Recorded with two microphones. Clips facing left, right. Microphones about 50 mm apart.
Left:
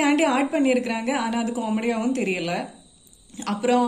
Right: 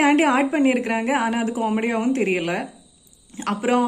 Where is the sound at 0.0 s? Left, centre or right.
Right.